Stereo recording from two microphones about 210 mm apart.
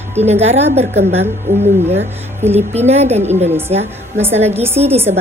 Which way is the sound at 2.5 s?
30° right (ahead or behind).